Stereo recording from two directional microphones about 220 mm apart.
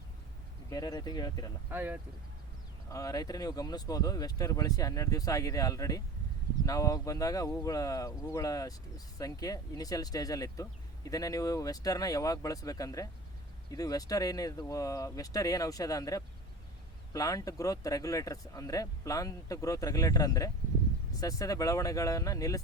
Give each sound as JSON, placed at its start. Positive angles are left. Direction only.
{"t": 0.7, "sound": "speech", "side_deg": 15}
{"t": 1.7, "sound": "speech", "side_deg": -10}
{"t": 2.9, "sound": "speech", "side_deg": 15}